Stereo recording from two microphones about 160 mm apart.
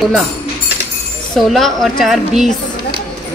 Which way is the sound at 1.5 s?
Centre (ahead or behind).